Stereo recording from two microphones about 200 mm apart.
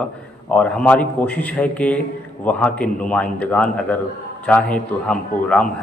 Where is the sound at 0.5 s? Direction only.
5° left (ahead or behind).